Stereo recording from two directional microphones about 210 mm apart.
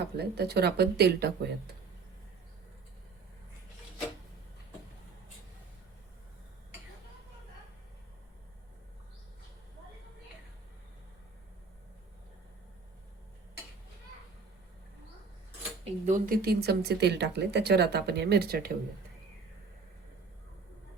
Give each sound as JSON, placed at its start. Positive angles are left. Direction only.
{"t": 0.2, "sound": "speech", "side_deg": -50}
{"t": 15.8, "sound": "speech", "side_deg": -35}